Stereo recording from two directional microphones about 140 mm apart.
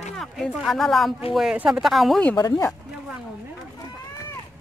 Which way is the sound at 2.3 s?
30° left (ahead or behind).